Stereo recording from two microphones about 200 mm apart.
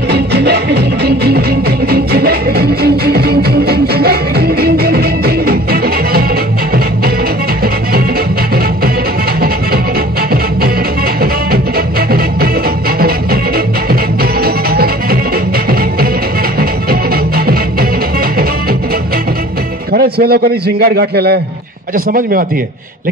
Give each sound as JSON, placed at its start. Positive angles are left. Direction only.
{"t": 0.1, "sound": "music", "side_deg": -55}
{"t": 14.4, "sound": "music", "side_deg": -50}
{"t": 16.5, "sound": "music", "side_deg": -50}
{"t": 19.9, "sound": "a man's voice", "side_deg": -50}